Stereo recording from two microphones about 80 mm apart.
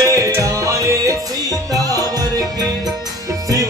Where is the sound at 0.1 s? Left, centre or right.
Right.